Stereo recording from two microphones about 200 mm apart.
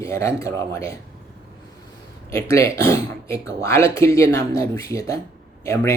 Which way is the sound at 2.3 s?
15° left (ahead or behind).